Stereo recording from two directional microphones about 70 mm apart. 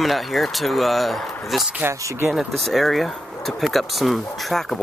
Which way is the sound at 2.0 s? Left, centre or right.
Right.